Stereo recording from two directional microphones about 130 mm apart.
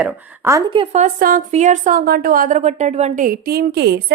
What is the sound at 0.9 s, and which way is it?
A woman's voice, 85° right.